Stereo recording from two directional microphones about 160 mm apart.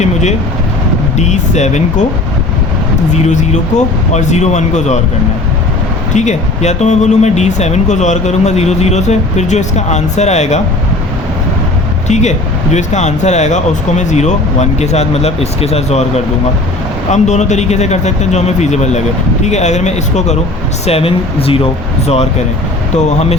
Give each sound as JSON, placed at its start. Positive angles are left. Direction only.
{"t": 0.0, "sound": "vehicle", "side_deg": 45}
{"t": 1.2, "sound": "speech", "side_deg": 45}
{"t": 3.1, "sound": "speech", "side_deg": 50}
{"t": 6.1, "sound": "speech", "side_deg": 45}
{"t": 12.0, "sound": "speech", "side_deg": 45}